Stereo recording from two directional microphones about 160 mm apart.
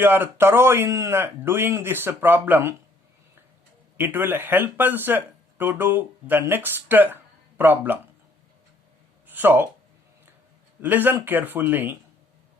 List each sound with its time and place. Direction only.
0.0 s speech: 15° right (ahead or behind)
3.9 s speech: 15° right (ahead or behind)
9.2 s speech: 10° right (ahead or behind)
10.8 s speech: 10° right (ahead or behind)